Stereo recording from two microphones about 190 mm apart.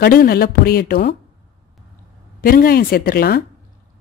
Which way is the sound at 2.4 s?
50° left (ahead or behind).